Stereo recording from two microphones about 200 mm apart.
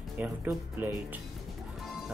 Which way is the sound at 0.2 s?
10° right (ahead or behind).